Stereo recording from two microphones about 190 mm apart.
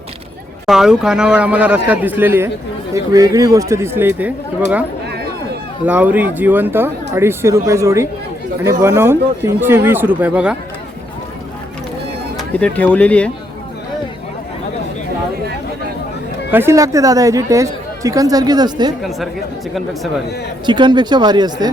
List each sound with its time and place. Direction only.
0.7 s speech: 5° right (ahead or behind)
5.8 s speech: 10° right (ahead or behind)
12.4 s speech: 5° left (ahead or behind)
16.5 s speech: 10° right (ahead or behind)
19.7 s speech: centre (ahead or behind)
20.7 s speech: 25° right (ahead or behind)